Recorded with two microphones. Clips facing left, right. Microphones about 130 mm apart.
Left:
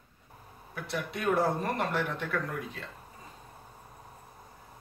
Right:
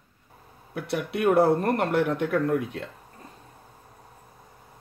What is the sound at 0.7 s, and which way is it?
Speech, 65° right (ahead or behind).